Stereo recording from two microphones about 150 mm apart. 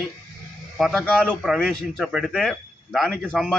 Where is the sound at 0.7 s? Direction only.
Centre (ahead or behind).